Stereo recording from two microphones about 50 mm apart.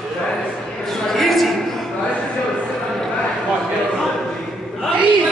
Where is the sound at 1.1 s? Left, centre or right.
Centre.